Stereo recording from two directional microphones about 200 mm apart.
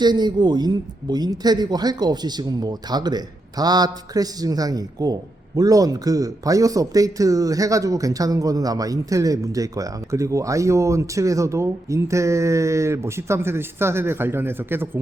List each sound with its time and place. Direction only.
0.0 s a man's voice: 20° right (ahead or behind)